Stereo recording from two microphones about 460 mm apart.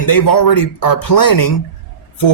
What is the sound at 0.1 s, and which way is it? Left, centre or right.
Speech, left.